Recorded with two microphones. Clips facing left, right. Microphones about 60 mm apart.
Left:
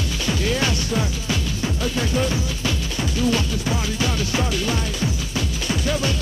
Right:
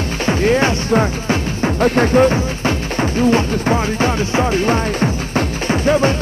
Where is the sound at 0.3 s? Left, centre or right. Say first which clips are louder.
Right 8 dB; right.